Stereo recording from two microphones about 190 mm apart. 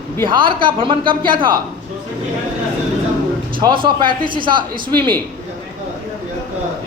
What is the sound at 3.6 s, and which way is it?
A man's voice, 25° right (ahead or behind).